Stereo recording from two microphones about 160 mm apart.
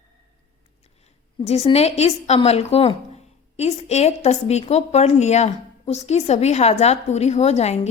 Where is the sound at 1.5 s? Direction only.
40° left (ahead or behind).